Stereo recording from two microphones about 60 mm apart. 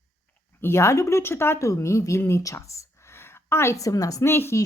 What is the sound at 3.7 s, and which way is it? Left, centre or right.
Speech, left.